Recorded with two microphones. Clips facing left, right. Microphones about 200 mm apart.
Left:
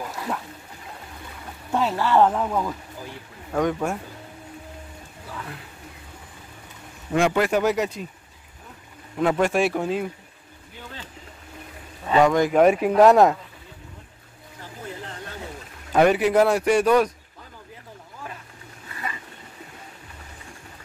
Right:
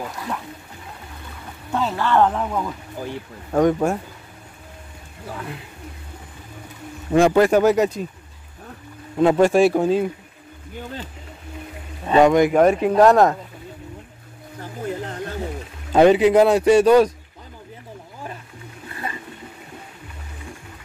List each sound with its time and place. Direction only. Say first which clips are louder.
1.7 s speech: even; 10° left (ahead or behind)
3.5 s speech: right 6 dB; 40° right (ahead or behind)
7.2 s speech: right 6 dB; 40° right (ahead or behind)
9.2 s speech: right 6 dB; 30° right (ahead or behind)
12.1 s speech: right 4 dB; 20° right (ahead or behind)
12.5 s speech: right 1 dB; 5° left (ahead or behind)
14.6 s a sound: right 8 dB; 45° right (ahead or behind)
15.9 s speech: right 5 dB; 20° right (ahead or behind)